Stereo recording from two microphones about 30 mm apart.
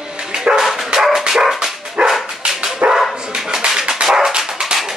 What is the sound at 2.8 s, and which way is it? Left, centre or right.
Dog, right.